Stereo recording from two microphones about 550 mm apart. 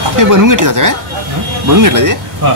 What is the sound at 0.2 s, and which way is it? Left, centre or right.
Speech, right.